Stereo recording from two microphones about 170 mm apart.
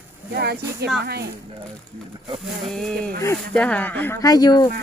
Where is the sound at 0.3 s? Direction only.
70° right (ahead or behind).